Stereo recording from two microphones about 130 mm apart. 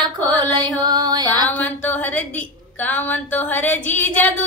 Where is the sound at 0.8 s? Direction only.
35° right (ahead or behind).